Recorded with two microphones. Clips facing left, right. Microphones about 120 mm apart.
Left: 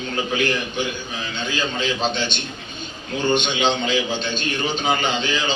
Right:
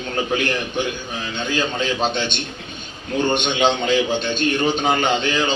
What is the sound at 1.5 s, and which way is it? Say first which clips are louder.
A man's voice: right 2 dB; 55° right (ahead or behind).